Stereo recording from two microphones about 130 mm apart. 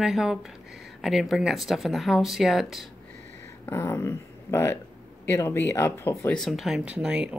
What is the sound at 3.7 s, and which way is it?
Speech, 20° left (ahead or behind).